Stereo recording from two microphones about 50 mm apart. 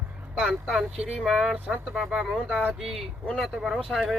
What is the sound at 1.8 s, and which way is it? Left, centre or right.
Speech, centre.